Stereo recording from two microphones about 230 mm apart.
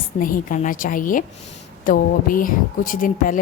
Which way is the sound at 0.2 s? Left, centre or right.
Left.